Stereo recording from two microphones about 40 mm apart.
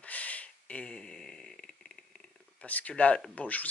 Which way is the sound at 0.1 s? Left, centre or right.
Left.